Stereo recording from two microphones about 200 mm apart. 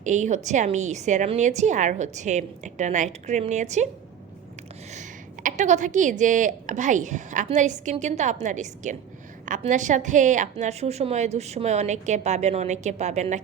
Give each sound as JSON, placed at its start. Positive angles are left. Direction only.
{"t": 0.0, "sound": "a woman's voice", "side_deg": -35}
{"t": 4.9, "sound": "a woman's voice", "side_deg": -40}